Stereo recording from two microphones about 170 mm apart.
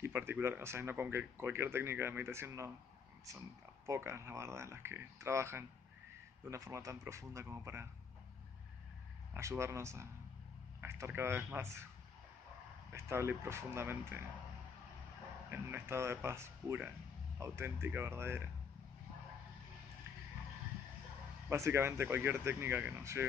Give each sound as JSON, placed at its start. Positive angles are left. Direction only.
{"t": 0.0, "sound": "speech", "side_deg": -15}
{"t": 9.3, "sound": "speech", "side_deg": -15}
{"t": 12.9, "sound": "speech", "side_deg": -15}
{"t": 15.5, "sound": "speech", "side_deg": -15}
{"t": 21.5, "sound": "speech", "side_deg": -15}